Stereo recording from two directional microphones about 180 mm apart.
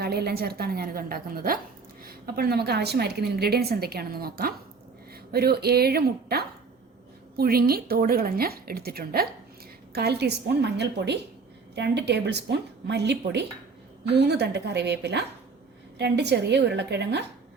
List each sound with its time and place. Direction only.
0.0 s a woman's voice: 60° right (ahead or behind)